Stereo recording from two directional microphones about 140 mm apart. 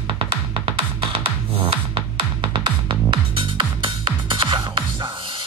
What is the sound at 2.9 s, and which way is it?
Music, 35° right (ahead or behind).